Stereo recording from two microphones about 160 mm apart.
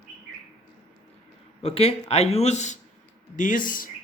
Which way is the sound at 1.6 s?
40° left (ahead or behind).